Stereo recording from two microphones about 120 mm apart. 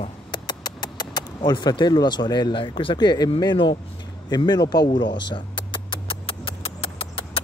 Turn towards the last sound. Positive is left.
turn(degrees=50)  # may be behind; listen again after turning